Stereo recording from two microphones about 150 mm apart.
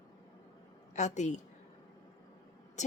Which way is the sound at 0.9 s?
50° left (ahead or behind).